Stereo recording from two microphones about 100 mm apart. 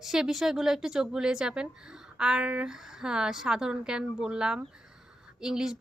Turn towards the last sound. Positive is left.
turn(degrees=-5)  # may be behind; listen again after turning